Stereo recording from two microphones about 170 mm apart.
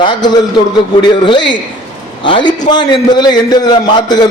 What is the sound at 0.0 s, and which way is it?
A man's voice, 25° left (ahead or behind).